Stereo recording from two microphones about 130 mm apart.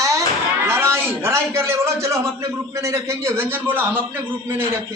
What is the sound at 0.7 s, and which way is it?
A man's voice, 20° right (ahead or behind).